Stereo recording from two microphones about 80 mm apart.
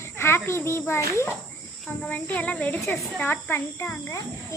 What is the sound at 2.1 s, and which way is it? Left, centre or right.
A child's voice, centre.